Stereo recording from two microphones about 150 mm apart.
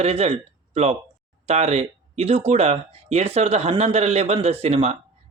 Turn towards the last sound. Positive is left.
turn(degrees=-45)  # may be behind; listen again after turning